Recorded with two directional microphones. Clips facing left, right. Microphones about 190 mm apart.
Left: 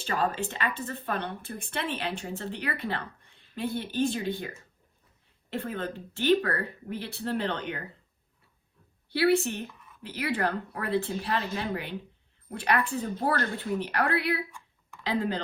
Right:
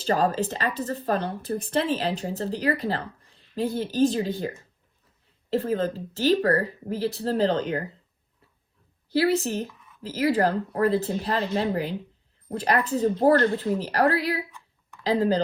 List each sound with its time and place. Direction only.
0.0 s speech: 35° right (ahead or behind)
9.1 s speech: 40° right (ahead or behind)